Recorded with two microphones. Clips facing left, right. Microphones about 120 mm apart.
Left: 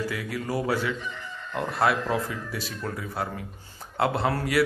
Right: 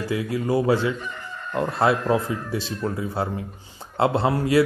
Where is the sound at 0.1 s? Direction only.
25° right (ahead or behind).